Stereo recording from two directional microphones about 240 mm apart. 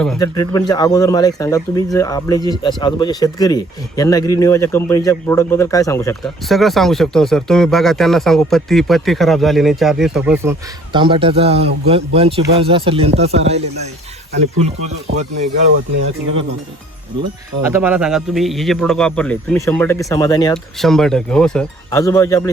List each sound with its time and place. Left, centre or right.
0.2 s speech: centre
6.5 s speech: centre
10.9 s speech: right
17.6 s speech: centre
20.8 s speech: centre